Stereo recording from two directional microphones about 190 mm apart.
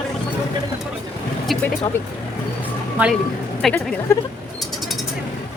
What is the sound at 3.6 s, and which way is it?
Speech, centre (ahead or behind).